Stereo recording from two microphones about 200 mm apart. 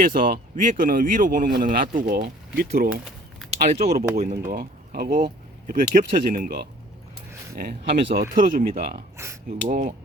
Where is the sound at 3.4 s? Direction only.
Centre (ahead or behind).